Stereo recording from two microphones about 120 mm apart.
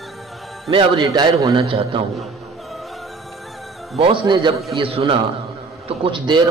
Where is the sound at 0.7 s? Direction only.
40° right (ahead or behind).